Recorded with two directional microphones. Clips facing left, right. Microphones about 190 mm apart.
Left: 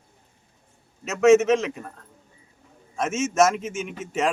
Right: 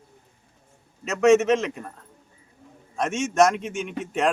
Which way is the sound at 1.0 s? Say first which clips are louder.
Left 1 dB; centre (ahead or behind).